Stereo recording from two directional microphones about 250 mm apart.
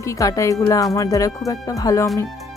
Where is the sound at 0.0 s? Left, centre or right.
Centre.